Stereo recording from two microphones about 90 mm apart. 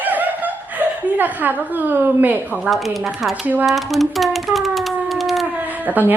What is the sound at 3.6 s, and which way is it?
Typing, centre (ahead or behind).